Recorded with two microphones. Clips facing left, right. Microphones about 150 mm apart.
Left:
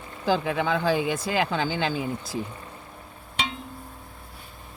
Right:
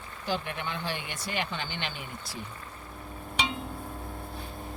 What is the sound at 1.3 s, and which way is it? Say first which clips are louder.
Speech: left 5 dB; 90° left.